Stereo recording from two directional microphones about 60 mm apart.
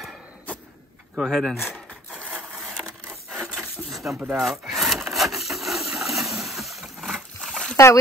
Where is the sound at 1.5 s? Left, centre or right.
Centre.